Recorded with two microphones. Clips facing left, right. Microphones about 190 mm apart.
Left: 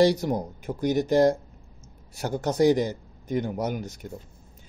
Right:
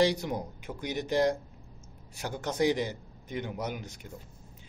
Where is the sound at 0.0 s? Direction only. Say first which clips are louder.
Left 6 dB; 40° left (ahead or behind).